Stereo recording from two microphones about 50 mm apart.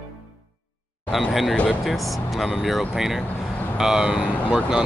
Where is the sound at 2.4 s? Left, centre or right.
Centre.